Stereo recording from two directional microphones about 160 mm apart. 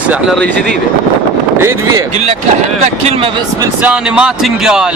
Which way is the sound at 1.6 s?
20° right (ahead or behind).